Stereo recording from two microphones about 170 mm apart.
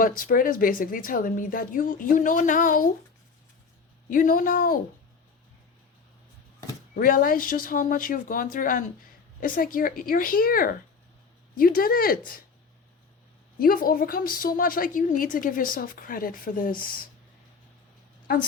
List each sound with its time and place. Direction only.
0.2 s a woman's voice: 55° left (ahead or behind)
4.1 s a woman's voice: 55° left (ahead or behind)
6.9 s a woman's voice: 55° left (ahead or behind)
13.6 s a woman's voice: 55° left (ahead or behind)